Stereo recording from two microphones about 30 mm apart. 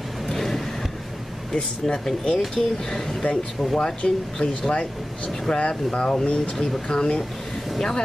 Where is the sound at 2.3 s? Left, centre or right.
Centre.